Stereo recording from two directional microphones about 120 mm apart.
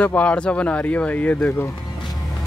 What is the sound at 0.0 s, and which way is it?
Speech, 10° left (ahead or behind).